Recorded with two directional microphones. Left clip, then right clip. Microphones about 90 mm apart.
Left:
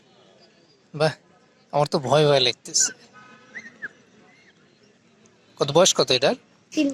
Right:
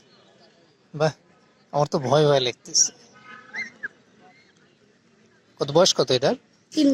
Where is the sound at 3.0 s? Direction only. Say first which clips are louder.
Right 3 dB; 30° right (ahead or behind).